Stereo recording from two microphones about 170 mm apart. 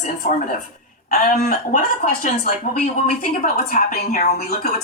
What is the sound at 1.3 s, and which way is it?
Speech, 45° left (ahead or behind).